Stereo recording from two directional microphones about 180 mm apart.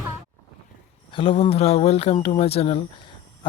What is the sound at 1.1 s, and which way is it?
Speech, 30° left (ahead or behind).